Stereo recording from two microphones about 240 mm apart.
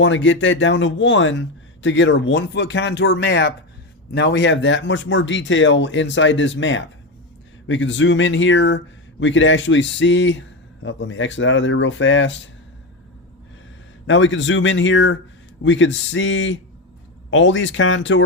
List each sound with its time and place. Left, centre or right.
0.0 s speech: left
14.1 s speech: left